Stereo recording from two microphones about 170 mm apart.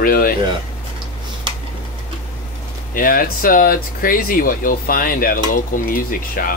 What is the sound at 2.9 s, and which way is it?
Speech, 55° left (ahead or behind).